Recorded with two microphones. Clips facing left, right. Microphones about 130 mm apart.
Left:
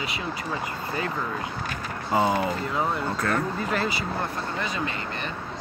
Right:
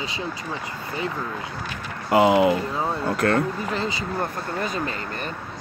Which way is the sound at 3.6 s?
20° right (ahead or behind).